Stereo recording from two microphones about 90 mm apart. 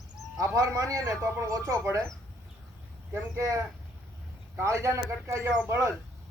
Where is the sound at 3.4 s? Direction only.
35° right (ahead or behind).